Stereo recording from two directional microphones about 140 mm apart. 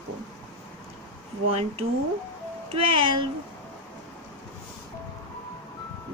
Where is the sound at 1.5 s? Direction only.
45° right (ahead or behind).